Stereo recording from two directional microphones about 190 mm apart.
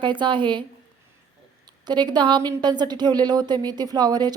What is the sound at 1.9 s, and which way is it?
Speech, 25° right (ahead or behind).